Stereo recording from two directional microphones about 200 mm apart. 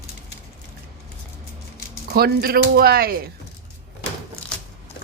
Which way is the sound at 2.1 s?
50° right (ahead or behind).